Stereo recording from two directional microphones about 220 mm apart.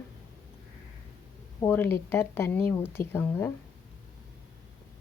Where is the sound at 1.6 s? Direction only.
10° left (ahead or behind).